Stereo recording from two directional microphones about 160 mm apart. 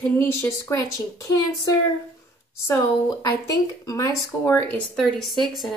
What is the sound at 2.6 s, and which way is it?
Speech, 20° left (ahead or behind).